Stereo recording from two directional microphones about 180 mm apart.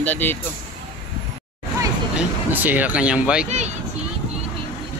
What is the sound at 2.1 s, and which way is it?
Speech, 10° right (ahead or behind).